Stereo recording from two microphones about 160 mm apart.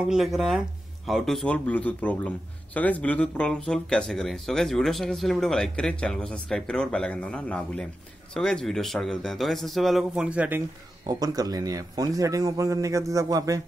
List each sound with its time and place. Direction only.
0.0 s a man's voice: 5° right (ahead or behind)
11.1 s a man's voice: 20° right (ahead or behind)